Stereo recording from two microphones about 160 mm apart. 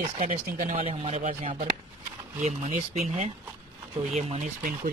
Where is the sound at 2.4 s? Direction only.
45° right (ahead or behind).